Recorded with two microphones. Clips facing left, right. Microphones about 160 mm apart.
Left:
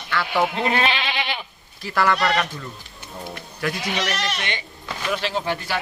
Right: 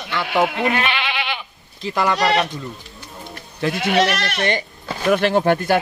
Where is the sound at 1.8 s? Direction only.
20° right (ahead or behind).